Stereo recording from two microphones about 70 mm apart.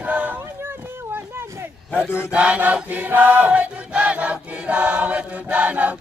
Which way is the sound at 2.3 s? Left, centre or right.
Centre.